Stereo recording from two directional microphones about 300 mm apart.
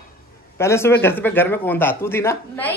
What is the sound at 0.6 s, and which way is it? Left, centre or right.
A woman's voice, centre.